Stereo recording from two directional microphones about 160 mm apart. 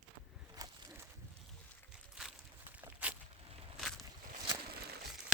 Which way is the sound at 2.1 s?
5° right (ahead or behind).